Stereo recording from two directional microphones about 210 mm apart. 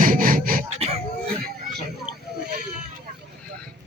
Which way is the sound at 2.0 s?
50° right (ahead or behind).